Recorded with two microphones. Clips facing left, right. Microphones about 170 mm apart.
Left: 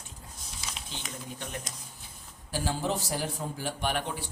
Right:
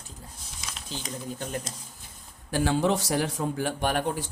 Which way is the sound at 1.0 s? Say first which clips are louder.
Right 6 dB; 35° right (ahead or behind).